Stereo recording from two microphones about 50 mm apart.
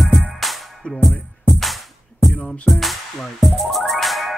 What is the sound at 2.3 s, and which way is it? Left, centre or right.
Music, centre.